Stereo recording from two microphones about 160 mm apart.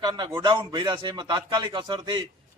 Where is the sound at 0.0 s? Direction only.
25° right (ahead or behind).